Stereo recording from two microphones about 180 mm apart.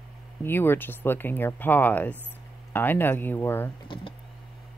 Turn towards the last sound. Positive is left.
turn(degrees=10)  # may be behind; listen again after turning